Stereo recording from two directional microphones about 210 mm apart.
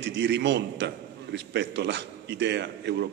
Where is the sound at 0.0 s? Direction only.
55° right (ahead or behind).